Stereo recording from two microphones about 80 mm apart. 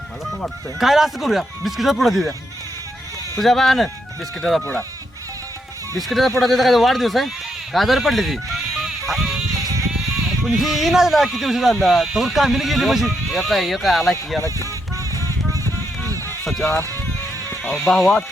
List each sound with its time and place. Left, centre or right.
0.8 s speech: centre
3.4 s speech: centre
6.0 s speech: centre
8.8 s music: centre
10.4 s speech: centre
16.5 s run: centre
17.8 s speech: centre